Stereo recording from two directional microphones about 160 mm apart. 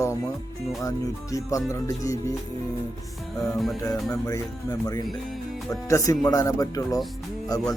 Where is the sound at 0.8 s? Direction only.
20° left (ahead or behind).